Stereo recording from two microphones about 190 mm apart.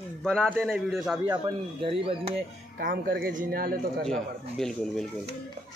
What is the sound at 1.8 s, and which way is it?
Speech, 30° right (ahead or behind).